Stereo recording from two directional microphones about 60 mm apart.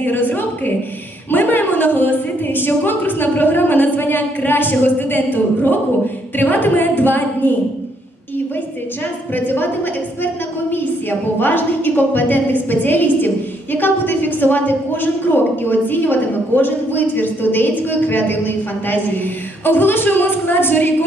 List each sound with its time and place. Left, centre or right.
0.0 s a sound: left
1.3 s a woman's voice: left
9.3 s a woman's voice: left